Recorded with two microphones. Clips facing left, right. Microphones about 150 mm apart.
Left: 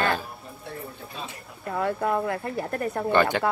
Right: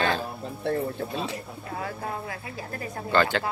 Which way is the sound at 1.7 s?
65° left (ahead or behind).